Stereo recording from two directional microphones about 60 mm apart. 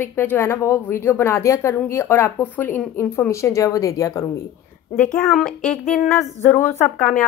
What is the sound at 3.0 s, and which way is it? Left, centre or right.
A woman's voice, left.